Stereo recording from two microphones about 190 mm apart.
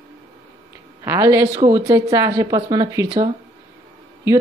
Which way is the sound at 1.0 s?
15° right (ahead or behind).